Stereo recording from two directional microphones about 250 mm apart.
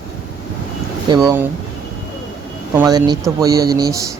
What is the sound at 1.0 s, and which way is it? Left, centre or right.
Speech, centre.